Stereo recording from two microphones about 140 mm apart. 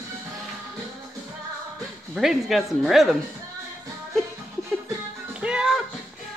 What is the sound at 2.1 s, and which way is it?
Speech, centre (ahead or behind).